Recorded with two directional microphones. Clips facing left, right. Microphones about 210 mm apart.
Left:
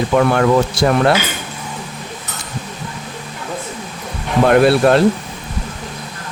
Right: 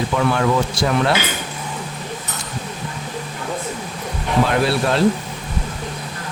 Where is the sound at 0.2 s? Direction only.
55° left (ahead or behind).